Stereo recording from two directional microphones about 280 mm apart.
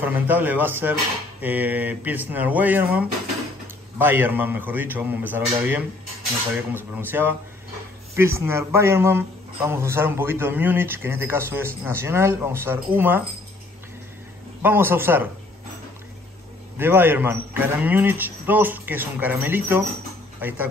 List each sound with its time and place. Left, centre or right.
0.0 s a man's voice: centre
14.6 s a man's voice: centre
16.7 s a man's voice: centre